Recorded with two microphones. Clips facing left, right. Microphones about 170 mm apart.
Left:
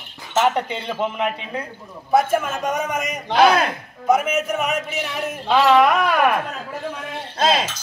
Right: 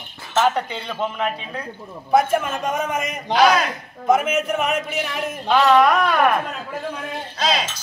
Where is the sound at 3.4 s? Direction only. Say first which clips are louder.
Left 1 dB; 55° left (ahead or behind).